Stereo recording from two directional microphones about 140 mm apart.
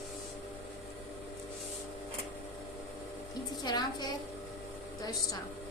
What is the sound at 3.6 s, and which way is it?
Music, 30° left (ahead or behind).